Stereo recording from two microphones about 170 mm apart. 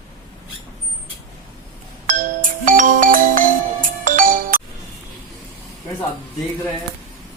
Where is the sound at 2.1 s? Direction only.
50° right (ahead or behind).